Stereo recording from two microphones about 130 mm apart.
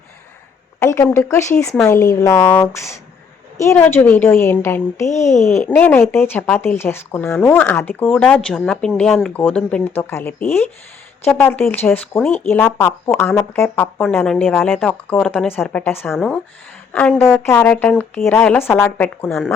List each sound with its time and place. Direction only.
0.8 s a woman's voice: 15° left (ahead or behind)
16.1 s a woman's voice: 5° left (ahead or behind)